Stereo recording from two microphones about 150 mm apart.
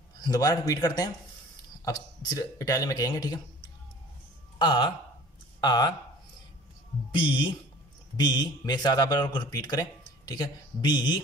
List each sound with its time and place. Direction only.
0.2 s speech: 25° left (ahead or behind)
4.6 s speech: 30° left (ahead or behind)
7.1 s speech: 35° left (ahead or behind)